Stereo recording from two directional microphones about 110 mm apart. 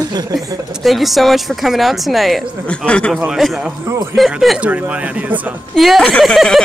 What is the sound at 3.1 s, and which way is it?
Speech, 5° right (ahead or behind).